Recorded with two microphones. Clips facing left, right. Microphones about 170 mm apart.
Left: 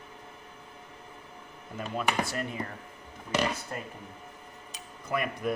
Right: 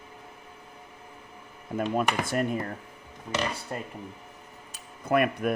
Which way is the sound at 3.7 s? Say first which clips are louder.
Right 3 dB; 25° right (ahead or behind).